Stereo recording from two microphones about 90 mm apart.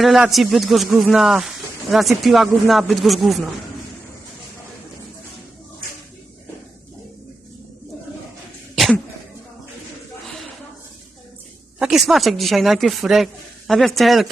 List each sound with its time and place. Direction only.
0.3 s speech: centre (ahead or behind)
8.7 s cough: centre (ahead or behind)
11.8 s speech: 5° right (ahead or behind)